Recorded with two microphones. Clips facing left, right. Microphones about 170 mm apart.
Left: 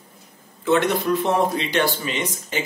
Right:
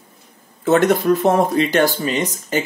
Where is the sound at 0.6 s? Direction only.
45° right (ahead or behind).